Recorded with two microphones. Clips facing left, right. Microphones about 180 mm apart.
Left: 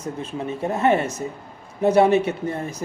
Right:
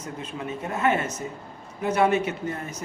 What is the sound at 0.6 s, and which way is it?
Speech, 30° left (ahead or behind).